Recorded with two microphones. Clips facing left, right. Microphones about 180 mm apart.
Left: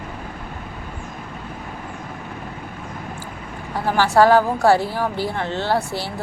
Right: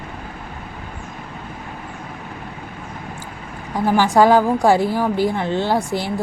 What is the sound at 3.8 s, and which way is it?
A woman's voice, 15° right (ahead or behind).